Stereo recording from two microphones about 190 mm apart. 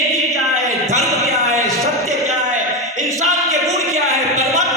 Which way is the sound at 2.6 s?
Centre (ahead or behind).